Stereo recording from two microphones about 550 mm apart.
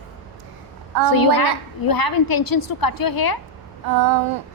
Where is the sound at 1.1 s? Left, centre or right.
Left.